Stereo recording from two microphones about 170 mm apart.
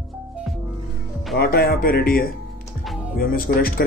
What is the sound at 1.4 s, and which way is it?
Speech, 65° left (ahead or behind).